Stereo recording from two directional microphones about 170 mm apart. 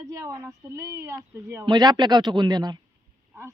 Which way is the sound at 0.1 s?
20° right (ahead or behind).